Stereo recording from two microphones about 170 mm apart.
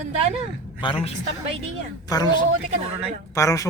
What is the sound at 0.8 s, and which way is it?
A man's voice, 30° left (ahead or behind).